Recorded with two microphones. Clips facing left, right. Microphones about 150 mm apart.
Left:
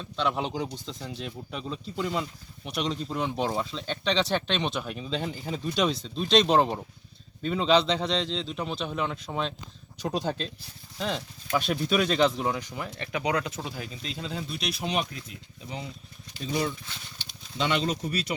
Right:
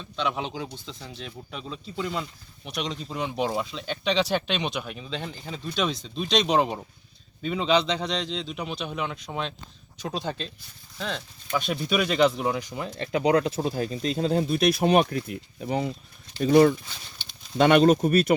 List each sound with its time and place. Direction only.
0.0 s speech: centre (ahead or behind); by 12.9 s 15° right (ahead or behind)
13.0 s speech: 30° right (ahead or behind); by 18.3 s 55° right (ahead or behind)